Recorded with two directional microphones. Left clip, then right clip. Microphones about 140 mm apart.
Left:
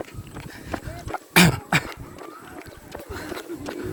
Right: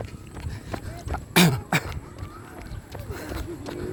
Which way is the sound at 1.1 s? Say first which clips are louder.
Left 3 dB; 45° right (ahead or behind).